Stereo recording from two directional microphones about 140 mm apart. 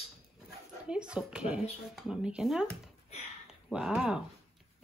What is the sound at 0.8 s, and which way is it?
Speech, 5° right (ahead or behind).